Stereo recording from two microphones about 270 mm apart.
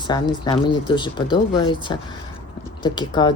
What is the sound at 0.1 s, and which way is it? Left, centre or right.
Speech, centre.